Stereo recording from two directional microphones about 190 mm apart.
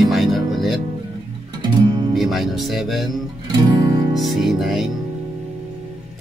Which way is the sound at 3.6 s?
20° right (ahead or behind).